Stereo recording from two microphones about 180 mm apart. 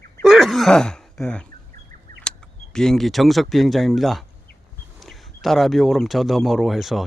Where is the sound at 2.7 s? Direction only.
5° left (ahead or behind).